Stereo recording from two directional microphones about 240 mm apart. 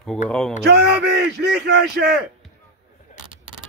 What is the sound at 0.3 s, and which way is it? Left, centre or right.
Speech, centre.